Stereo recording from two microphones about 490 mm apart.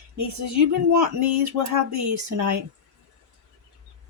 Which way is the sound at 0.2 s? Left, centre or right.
Right.